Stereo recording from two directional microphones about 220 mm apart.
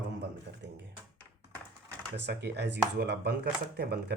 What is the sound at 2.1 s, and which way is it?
Speech, 50° right (ahead or behind).